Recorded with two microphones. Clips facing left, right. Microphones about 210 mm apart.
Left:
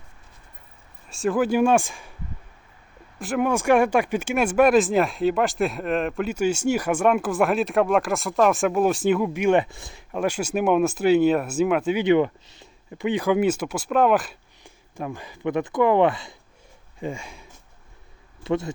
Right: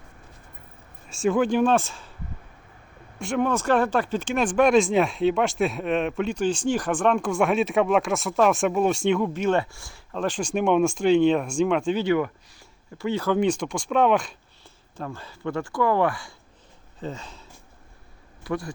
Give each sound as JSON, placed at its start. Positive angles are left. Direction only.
{"t": 1.1, "sound": "speech", "side_deg": 0}
{"t": 3.2, "sound": "speech", "side_deg": 5}
{"t": 12.0, "sound": "speech", "side_deg": 25}
{"t": 18.4, "sound": "speech", "side_deg": 25}